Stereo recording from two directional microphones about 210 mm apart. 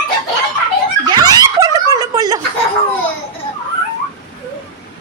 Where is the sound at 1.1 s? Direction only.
20° right (ahead or behind).